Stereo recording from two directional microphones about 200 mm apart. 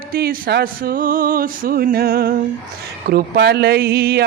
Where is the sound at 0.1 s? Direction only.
45° right (ahead or behind).